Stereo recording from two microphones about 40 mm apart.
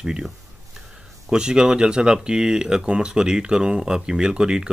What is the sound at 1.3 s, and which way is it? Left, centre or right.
Speech, centre.